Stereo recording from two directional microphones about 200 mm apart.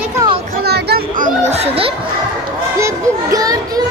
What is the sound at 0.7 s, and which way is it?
Chatter, 55° right (ahead or behind).